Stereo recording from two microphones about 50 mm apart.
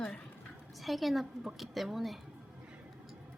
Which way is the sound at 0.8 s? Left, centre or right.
Centre.